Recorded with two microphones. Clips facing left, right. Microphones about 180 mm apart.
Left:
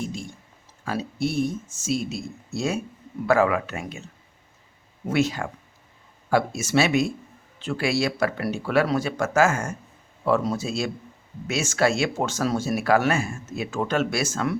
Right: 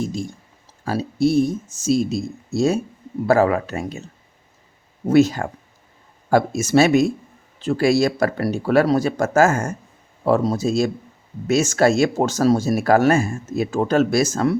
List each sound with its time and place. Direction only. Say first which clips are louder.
0.0 s a sound: right 6 dB; 40° right (ahead or behind)
0.9 s speech: right 8 dB; 35° right (ahead or behind)
5.0 s speech: right 8 dB; 40° right (ahead or behind)